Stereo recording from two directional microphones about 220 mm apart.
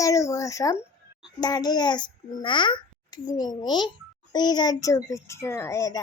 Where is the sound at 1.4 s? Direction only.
20° left (ahead or behind).